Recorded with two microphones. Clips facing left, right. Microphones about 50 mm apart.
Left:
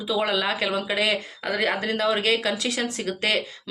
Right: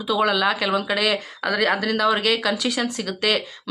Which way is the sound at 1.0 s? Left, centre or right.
Right.